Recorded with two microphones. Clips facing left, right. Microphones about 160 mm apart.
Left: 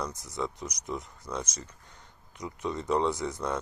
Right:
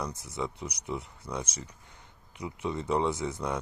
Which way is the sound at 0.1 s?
60° right (ahead or behind).